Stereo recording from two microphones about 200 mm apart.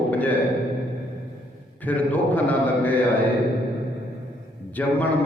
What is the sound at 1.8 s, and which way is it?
A man's voice, 10° left (ahead or behind).